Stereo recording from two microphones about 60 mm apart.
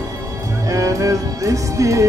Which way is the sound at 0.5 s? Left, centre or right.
Right.